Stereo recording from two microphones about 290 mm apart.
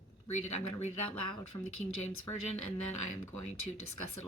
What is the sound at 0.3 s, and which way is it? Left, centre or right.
Speech, left.